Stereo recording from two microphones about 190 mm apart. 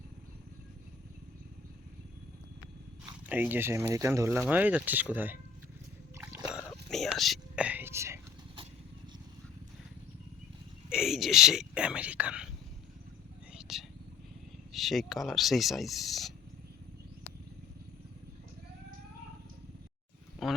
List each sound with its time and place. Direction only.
3.2 s speech: 10° right (ahead or behind)
6.1 s a sound: 15° right (ahead or behind)
6.5 s whispering: centre (ahead or behind)
10.8 s whispering: 5° right (ahead or behind)
13.5 s whispering: 5° right (ahead or behind)
14.7 s speech: centre (ahead or behind)
20.4 s a sound: centre (ahead or behind)